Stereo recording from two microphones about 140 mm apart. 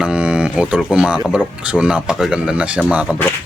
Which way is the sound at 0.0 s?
5° right (ahead or behind).